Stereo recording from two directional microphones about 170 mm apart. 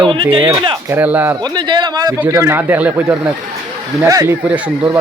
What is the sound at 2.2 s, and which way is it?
Speech, 15° right (ahead or behind).